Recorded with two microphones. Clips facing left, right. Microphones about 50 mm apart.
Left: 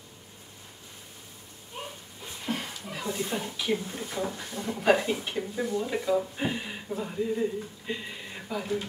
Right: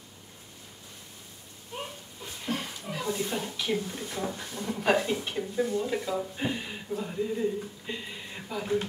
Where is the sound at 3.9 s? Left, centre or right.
Centre.